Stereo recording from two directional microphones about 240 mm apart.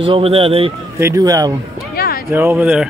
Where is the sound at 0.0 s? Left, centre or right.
Right.